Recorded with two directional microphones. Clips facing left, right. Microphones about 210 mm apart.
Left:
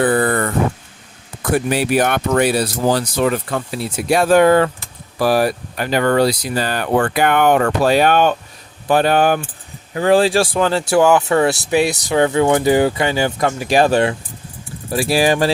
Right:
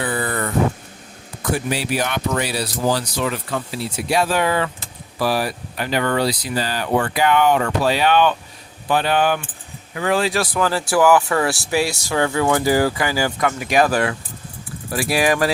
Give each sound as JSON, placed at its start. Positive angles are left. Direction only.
{"t": 0.0, "sound": "vehicle", "side_deg": 55}
{"t": 1.5, "sound": "speech", "side_deg": 55}
{"t": 9.9, "sound": "speech", "side_deg": 35}